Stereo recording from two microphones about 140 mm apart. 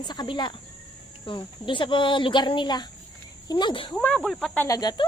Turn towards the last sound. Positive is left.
turn(degrees=25)  # may be behind; listen again after turning